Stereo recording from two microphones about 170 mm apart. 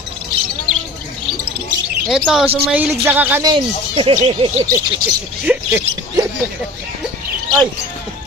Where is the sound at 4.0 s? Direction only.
35° right (ahead or behind).